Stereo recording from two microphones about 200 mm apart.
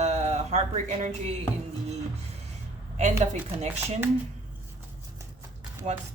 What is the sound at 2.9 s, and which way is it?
Speech, 35° right (ahead or behind).